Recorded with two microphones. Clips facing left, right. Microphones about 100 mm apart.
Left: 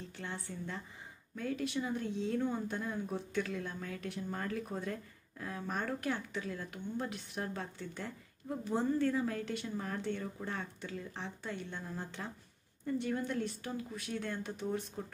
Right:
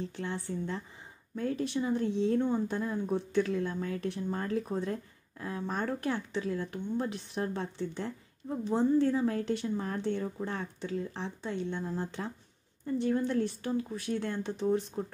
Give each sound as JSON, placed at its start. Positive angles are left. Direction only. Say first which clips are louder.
{"t": 0.1, "sound": "speech", "louder": "right 7 dB", "side_deg": -30}